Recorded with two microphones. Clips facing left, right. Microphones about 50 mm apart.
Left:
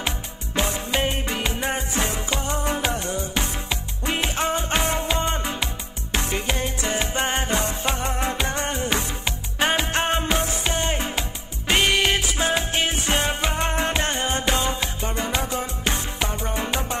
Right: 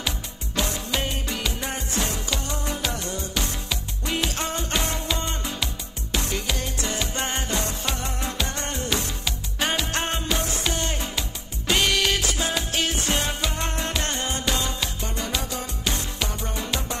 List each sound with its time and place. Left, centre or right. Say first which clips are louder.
0.6 s music: left 3 dB; left